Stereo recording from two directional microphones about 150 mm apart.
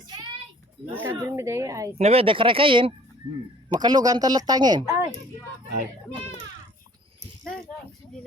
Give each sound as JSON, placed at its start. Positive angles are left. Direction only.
{"t": 0.9, "sound": "speech", "side_deg": -15}
{"t": 2.0, "sound": "speech", "side_deg": -40}